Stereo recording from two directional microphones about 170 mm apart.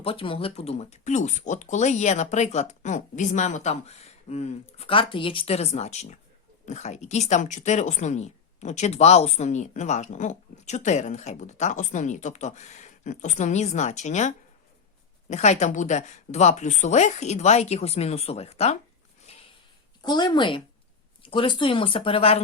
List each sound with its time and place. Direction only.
0.0 s a woman's voice: 30° left (ahead or behind)
19.3 s a sound: 35° left (ahead or behind)
20.0 s a woman's voice: 25° left (ahead or behind)